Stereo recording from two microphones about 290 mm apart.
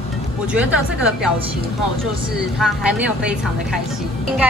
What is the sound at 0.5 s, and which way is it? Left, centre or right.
Speech, centre.